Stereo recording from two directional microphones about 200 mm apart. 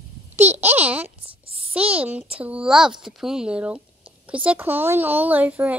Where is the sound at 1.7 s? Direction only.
5° right (ahead or behind).